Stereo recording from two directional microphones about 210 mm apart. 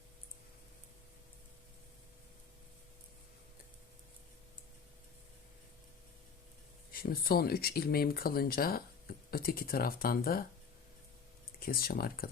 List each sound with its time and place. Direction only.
6.9 s speech: 45° left (ahead or behind)
11.6 s speech: 45° left (ahead or behind)